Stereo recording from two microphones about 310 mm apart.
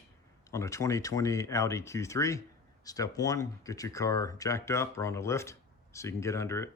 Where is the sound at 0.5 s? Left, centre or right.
Centre.